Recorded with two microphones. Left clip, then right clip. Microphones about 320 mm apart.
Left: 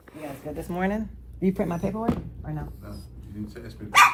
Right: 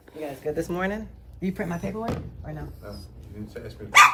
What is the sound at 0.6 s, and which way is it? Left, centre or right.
Speech, centre.